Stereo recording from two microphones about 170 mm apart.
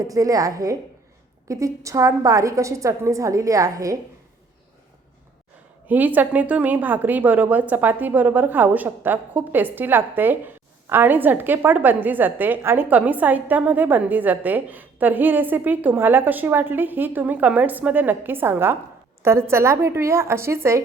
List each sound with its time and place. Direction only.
0.0 s a woman's voice: 20° right (ahead or behind)
5.9 s a woman's voice: 10° right (ahead or behind)